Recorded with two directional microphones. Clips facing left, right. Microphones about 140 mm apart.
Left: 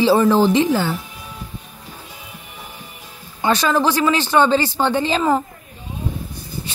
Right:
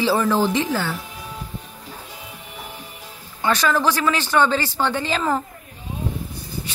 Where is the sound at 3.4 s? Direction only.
25° left (ahead or behind).